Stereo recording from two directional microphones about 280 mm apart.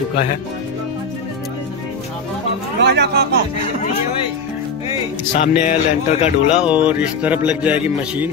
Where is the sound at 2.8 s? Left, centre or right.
Right.